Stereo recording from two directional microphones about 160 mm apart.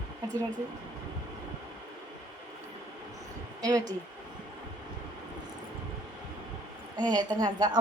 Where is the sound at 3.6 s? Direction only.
25° right (ahead or behind).